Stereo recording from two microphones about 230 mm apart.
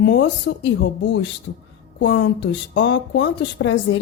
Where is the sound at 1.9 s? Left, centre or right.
Left.